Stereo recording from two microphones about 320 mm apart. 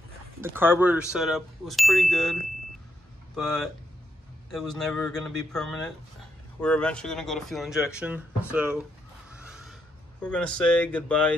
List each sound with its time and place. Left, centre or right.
0.4 s ding: centre
3.3 s ding: centre
9.4 s a sound: centre
10.2 s ding: centre